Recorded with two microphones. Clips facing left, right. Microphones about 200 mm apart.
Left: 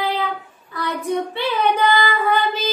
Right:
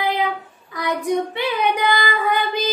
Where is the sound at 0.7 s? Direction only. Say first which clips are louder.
Right 2 dB; 15° right (ahead or behind).